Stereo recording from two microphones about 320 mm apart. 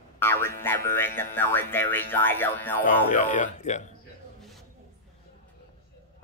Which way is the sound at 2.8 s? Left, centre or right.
Left.